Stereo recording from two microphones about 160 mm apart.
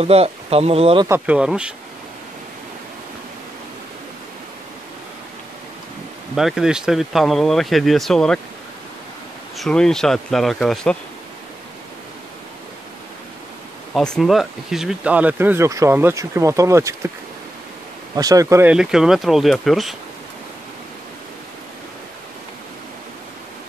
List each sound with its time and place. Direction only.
0.0 s speech: 40° right (ahead or behind)
1.0 s speech: 10° right (ahead or behind)
6.3 s speech: centre (ahead or behind)
9.6 s speech: 5° left (ahead or behind)
13.9 s speech: centre (ahead or behind); by 17.1 s 20° right (ahead or behind)
18.1 s speech: 20° right (ahead or behind)
18.7 s speech: 5° right (ahead or behind)